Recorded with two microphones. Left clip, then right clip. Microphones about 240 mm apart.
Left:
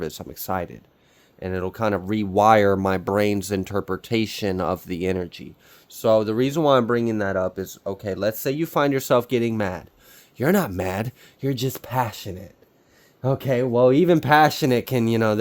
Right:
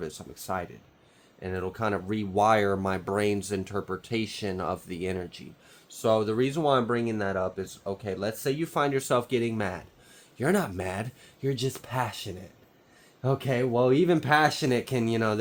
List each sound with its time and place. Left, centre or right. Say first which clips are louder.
0.0 s speech: left 7 dB; left